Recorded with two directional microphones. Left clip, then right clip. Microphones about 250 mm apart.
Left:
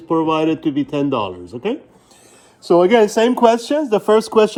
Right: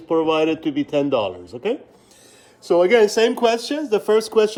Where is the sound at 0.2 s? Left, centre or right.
Centre.